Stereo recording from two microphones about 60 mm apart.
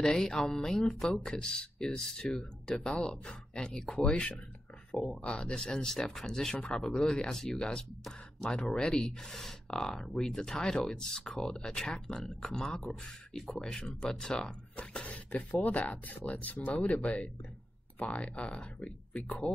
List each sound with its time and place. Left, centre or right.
0.0 s speech: centre
4.9 s speech: centre
5.2 s speech: centre